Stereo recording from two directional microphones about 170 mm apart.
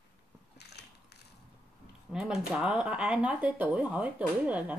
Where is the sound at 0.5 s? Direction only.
75° left (ahead or behind).